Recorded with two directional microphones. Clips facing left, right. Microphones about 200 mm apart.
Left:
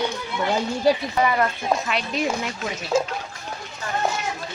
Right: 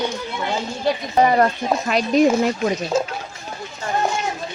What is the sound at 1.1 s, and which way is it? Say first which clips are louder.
Speech: right 5 dB; 40° right (ahead or behind).